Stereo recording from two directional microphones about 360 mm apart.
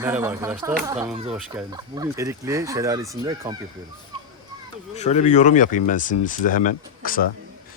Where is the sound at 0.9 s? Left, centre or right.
Centre.